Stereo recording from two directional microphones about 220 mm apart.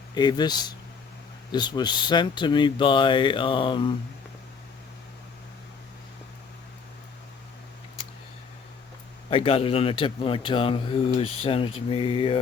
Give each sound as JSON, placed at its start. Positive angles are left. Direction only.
{"t": 0.1, "sound": "speech", "side_deg": 20}
{"t": 9.3, "sound": "speech", "side_deg": 25}